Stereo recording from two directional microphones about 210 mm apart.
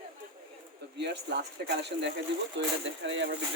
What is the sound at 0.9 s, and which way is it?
Speech, 55° right (ahead or behind).